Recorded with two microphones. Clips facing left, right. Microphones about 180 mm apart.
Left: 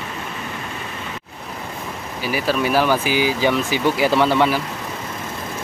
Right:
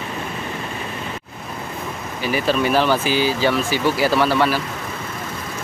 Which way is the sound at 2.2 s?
10° left (ahead or behind).